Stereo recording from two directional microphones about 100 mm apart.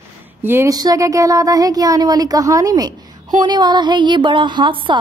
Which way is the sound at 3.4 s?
45° right (ahead or behind).